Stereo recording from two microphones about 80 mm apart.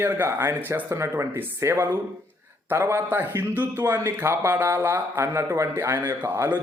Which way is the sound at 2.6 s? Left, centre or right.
Right.